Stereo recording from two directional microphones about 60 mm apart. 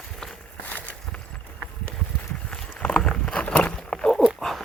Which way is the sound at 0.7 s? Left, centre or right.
Left.